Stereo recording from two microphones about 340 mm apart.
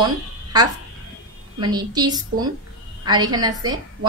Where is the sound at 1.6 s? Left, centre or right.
Centre.